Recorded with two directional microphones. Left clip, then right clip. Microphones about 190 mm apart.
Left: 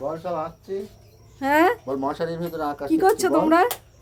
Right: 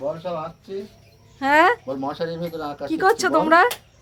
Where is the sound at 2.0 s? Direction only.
45° left (ahead or behind).